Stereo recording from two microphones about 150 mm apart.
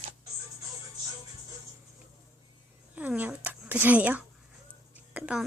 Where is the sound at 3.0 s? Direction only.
10° right (ahead or behind).